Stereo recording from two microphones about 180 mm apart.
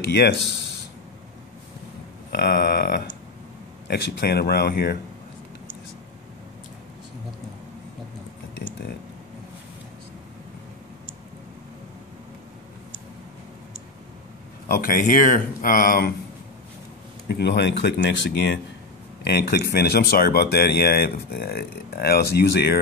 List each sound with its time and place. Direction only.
0.1 s speech: 70° left (ahead or behind)
2.3 s speech: 65° left (ahead or behind)
14.7 s speech: 50° left (ahead or behind)
17.3 s speech: 70° left (ahead or behind)